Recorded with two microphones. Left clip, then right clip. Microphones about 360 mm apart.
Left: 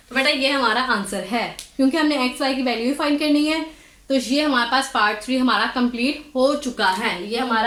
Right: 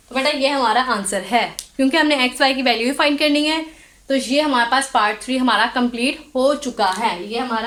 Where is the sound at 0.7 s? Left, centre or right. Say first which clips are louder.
Right 3 dB; centre.